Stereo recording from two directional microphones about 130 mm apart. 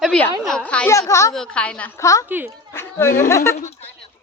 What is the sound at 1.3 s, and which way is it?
Speech, 5° left (ahead or behind).